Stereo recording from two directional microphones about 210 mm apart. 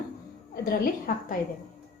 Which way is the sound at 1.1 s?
40° left (ahead or behind).